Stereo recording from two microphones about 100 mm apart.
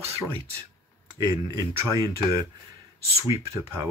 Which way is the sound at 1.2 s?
40° right (ahead or behind).